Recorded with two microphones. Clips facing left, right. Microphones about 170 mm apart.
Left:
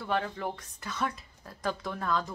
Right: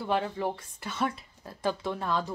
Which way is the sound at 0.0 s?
30° right (ahead or behind).